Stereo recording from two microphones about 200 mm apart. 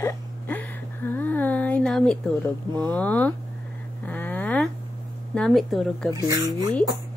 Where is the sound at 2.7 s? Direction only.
20° right (ahead or behind).